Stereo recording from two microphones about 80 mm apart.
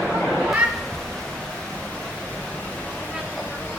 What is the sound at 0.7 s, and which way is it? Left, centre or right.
Cat, centre.